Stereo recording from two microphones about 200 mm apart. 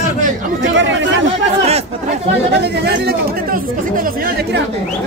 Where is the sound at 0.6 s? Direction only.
65° right (ahead or behind).